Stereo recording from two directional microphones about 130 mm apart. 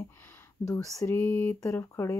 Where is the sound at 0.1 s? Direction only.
15° left (ahead or behind).